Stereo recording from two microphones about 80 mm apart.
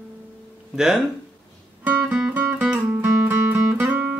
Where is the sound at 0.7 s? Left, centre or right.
Centre.